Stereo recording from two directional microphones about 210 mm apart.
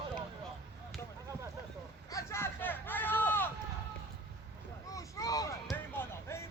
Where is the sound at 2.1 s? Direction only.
10° left (ahead or behind).